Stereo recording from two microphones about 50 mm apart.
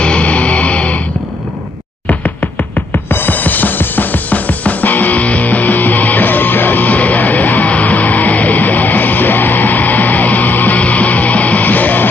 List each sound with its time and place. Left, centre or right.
0.0 s music: left
2.0 s music: left
3.1 s music: left